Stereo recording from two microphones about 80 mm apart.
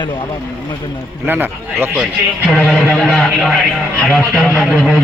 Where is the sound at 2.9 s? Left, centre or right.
Centre.